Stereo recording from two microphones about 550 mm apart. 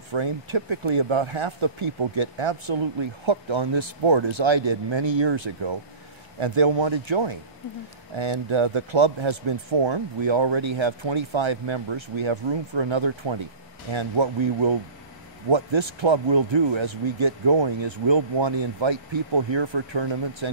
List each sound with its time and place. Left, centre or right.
0.1 s speech: right